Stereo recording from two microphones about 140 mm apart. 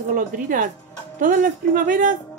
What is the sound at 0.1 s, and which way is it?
Speech, 75° right (ahead or behind).